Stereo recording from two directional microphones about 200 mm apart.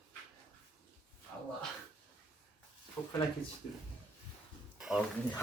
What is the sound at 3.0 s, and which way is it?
Speech, 20° left (ahead or behind).